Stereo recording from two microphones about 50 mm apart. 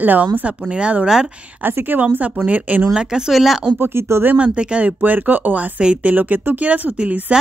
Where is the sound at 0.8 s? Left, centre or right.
Right.